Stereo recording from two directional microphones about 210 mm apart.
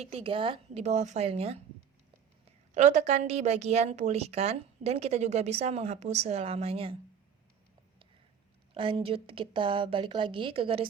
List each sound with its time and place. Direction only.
0.0 s a woman's voice: 30° right (ahead or behind)
8.7 s a woman's voice: 25° right (ahead or behind)